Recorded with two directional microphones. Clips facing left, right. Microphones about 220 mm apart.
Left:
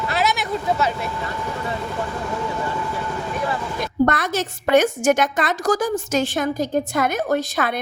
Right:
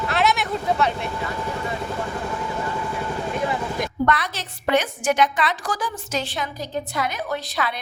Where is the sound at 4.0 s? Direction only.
45° left (ahead or behind).